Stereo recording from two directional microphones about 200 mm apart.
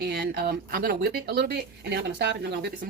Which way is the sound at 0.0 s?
50° right (ahead or behind).